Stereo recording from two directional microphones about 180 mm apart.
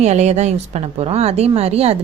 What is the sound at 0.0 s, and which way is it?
A woman's voice, 40° right (ahead or behind).